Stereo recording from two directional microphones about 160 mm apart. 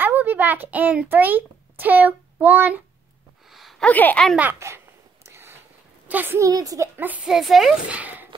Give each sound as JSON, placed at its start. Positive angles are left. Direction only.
{"t": 0.0, "sound": "a child's voice", "side_deg": -10}
{"t": 3.5, "sound": "a sound", "side_deg": 0}
{"t": 3.9, "sound": "speech", "side_deg": 10}
{"t": 4.4, "sound": "a sound", "side_deg": -15}
{"t": 6.0, "sound": "a woman's voice", "side_deg": -10}
{"t": 7.0, "sound": "speech", "side_deg": -10}